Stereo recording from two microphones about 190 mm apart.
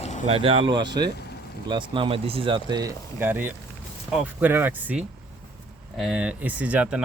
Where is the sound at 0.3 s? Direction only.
30° right (ahead or behind).